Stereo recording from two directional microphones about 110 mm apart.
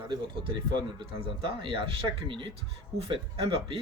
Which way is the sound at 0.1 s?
45° right (ahead or behind).